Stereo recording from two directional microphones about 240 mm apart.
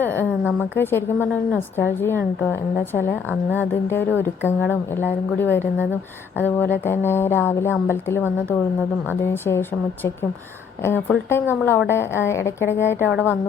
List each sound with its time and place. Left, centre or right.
0.0 s a woman's voice: centre